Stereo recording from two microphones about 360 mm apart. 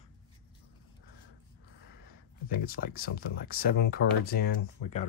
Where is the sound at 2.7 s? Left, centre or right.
Left.